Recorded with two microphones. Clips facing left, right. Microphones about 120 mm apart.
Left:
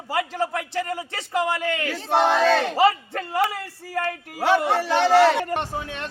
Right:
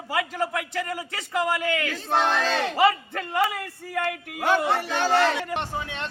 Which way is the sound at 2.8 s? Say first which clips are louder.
Left 2 dB; 35° left (ahead or behind).